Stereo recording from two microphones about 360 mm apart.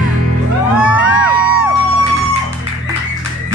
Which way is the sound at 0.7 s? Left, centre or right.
Centre.